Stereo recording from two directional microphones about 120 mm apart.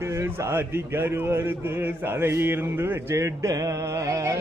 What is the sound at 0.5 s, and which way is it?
A man's voice, 20° right (ahead or behind).